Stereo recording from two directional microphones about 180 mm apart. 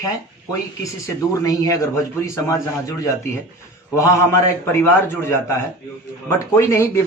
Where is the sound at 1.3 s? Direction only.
20° left (ahead or behind).